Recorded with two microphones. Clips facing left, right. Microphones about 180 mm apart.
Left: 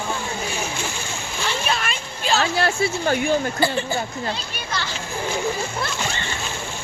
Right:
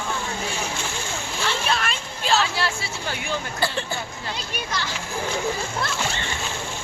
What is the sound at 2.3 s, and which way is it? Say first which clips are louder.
Speech: left 5 dB; 50° left (ahead or behind).